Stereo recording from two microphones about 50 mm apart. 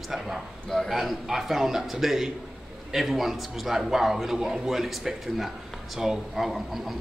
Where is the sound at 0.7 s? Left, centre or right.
Centre.